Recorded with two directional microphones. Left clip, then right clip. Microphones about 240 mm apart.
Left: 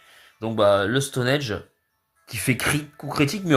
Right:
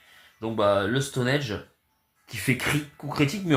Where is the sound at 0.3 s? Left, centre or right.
Left.